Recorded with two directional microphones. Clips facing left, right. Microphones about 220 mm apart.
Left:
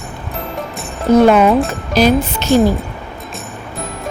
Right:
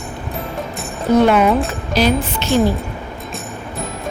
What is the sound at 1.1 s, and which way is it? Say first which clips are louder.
Speech: left 3 dB; 45° left (ahead or behind).